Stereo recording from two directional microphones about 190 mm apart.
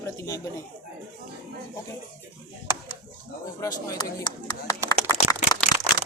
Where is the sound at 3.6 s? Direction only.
20° left (ahead or behind).